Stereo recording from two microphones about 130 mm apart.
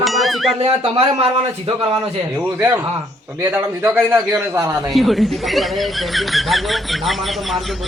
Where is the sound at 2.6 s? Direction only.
15° right (ahead or behind).